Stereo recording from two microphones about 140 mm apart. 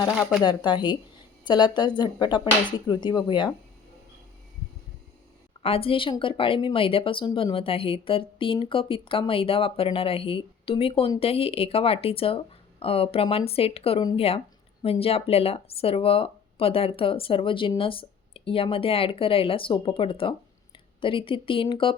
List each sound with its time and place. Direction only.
0.2 s speech: centre (ahead or behind)
0.4 s speech: 30° left (ahead or behind)
5.6 s speech: 40° left (ahead or behind)